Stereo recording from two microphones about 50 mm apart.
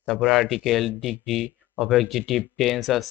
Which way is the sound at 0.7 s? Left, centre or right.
Centre.